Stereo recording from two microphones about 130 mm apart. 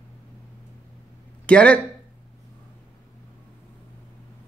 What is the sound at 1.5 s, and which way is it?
Speech, 10° left (ahead or behind).